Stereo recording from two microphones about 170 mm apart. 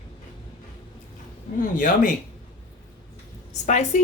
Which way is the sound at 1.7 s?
55° left (ahead or behind).